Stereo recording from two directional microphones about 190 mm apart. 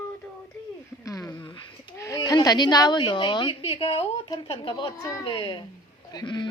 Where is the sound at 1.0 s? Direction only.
20° left (ahead or behind).